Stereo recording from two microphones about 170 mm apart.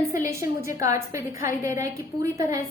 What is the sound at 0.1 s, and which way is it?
A woman's voice, 20° right (ahead or behind).